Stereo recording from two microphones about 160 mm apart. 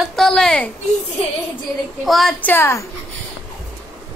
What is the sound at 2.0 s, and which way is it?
Speech, centre (ahead or behind).